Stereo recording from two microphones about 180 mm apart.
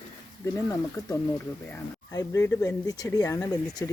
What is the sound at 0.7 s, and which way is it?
Speech, 15° left (ahead or behind).